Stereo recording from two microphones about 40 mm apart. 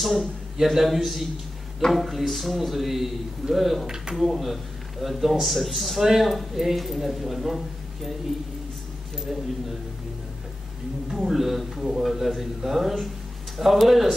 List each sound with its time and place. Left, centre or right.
0.0 s a man's voice: centre
3.8 s a man's voice: centre
4.1 s a man's voice: centre
9.3 s a man's voice: centre
11.1 s a man's voice: centre